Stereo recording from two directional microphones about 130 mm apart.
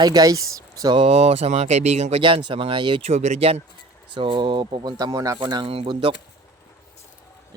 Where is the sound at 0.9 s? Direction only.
55° right (ahead or behind).